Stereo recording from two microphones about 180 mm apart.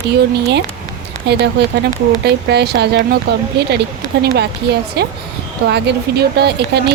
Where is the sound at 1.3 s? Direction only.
70° right (ahead or behind).